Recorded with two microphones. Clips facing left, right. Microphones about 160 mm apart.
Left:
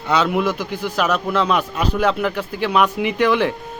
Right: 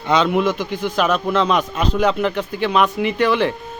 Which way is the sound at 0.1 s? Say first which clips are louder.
Right 2 dB; 5° left (ahead or behind).